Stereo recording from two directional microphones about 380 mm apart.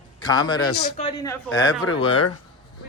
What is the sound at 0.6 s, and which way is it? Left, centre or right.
Speech, left.